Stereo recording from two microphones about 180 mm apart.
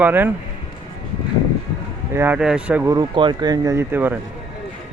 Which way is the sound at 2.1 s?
10° right (ahead or behind).